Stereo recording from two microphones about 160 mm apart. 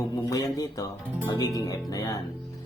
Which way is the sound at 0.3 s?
20° left (ahead or behind).